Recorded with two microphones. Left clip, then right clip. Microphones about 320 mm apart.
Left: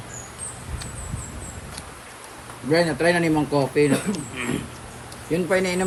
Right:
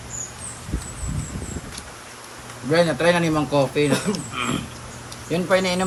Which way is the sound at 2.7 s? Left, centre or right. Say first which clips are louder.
Right 2 dB; centre.